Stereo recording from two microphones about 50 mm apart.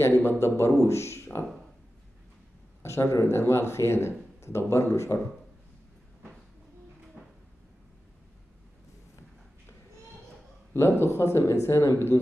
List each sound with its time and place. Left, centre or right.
0.2 s speech: left
2.8 s speech: left
10.7 s speech: left